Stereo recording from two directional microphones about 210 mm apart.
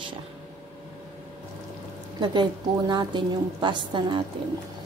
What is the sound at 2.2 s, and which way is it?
A woman's voice, 20° right (ahead or behind).